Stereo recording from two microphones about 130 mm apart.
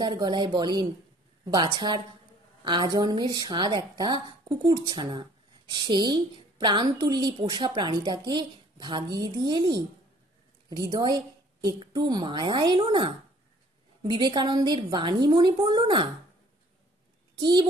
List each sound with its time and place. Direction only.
0.0 s a woman's voice: 35° right (ahead or behind)
17.4 s a woman's voice: 35° right (ahead or behind)